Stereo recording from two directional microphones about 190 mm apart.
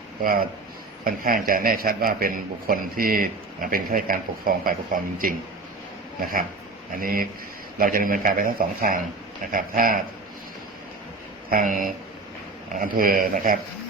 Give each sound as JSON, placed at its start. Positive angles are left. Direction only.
{"t": 0.2, "sound": "a man's voice", "side_deg": -50}
{"t": 6.1, "sound": "a man's voice", "side_deg": -50}
{"t": 11.4, "sound": "a man's voice", "side_deg": -45}